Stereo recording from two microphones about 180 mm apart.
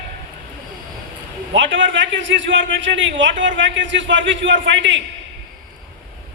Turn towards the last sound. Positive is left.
turn(degrees=-90)